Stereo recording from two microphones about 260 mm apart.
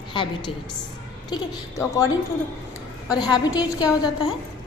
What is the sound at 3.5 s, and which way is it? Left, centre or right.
Speech, centre.